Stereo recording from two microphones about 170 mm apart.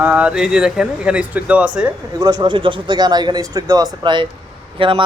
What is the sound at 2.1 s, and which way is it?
Speech, 25° right (ahead or behind).